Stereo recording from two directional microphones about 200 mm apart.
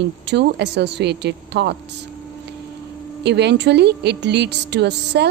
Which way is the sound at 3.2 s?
55° right (ahead or behind).